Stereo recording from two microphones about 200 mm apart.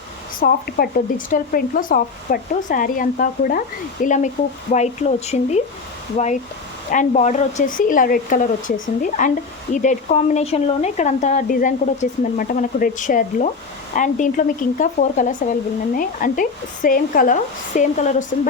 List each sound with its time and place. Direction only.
0.3 s speech: 45° left (ahead or behind)